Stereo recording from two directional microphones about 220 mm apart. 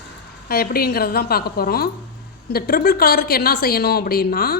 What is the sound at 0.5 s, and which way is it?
A woman's voice, 45° left (ahead or behind).